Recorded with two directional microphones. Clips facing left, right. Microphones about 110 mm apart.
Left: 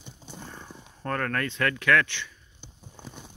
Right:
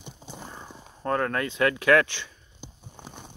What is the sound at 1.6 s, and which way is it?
Speech, 20° right (ahead or behind).